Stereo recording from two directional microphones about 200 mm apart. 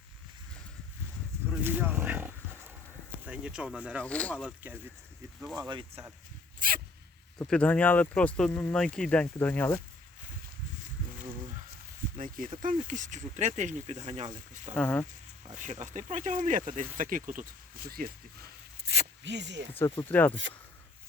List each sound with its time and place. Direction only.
1.5 s roaring cats: 10° right (ahead or behind)
3.2 s speech: 5° right (ahead or behind)
3.9 s speech: 5° left (ahead or behind)
4.4 s speech: 5° right (ahead or behind)
5.5 s speech: 25° right (ahead or behind)
6.6 s dog: 45° right (ahead or behind)
7.3 s speech: 5° left (ahead or behind)
12.1 s speech: 45° right (ahead or behind)
14.8 s speech: 5° left (ahead or behind)
15.5 s speech: 35° right (ahead or behind)
18.9 s zipper: 60° right (ahead or behind)
19.7 s speech: 10° left (ahead or behind)